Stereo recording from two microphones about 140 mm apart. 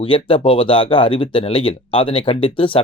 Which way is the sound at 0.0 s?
40° left (ahead or behind).